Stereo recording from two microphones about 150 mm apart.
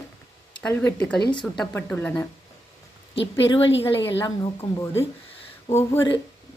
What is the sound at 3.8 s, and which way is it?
Speech, 15° left (ahead or behind).